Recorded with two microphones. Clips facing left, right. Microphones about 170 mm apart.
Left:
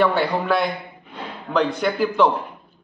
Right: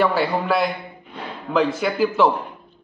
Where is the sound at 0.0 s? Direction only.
Centre (ahead or behind).